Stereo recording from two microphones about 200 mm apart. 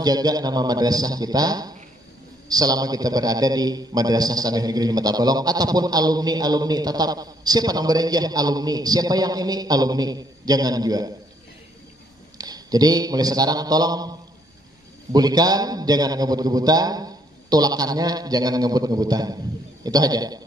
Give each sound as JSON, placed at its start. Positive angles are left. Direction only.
{"t": 0.0, "sound": "a man's voice", "side_deg": -20}
{"t": 12.4, "sound": "a man's voice", "side_deg": -20}
{"t": 15.1, "sound": "a man's voice", "side_deg": -20}